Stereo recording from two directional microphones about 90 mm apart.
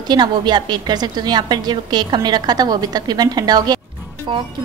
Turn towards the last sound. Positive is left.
turn(degrees=-60)  # may be behind; listen again after turning